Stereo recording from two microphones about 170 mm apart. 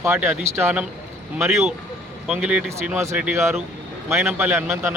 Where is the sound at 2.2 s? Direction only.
5° right (ahead or behind).